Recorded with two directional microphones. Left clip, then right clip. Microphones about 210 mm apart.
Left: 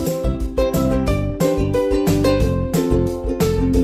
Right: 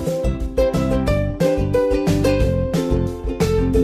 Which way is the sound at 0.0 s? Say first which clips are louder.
Even; centre (ahead or behind).